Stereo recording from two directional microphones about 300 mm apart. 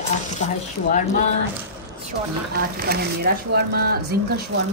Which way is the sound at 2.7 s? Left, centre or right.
Right.